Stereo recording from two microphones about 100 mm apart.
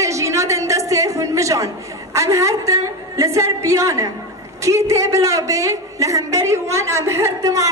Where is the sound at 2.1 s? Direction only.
30° right (ahead or behind).